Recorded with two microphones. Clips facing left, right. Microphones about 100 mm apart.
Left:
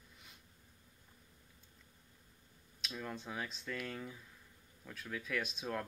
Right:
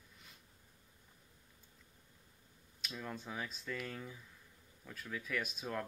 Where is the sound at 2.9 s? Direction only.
5° left (ahead or behind).